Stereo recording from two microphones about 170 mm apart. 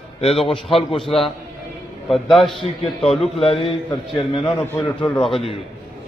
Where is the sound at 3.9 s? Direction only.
30° left (ahead or behind).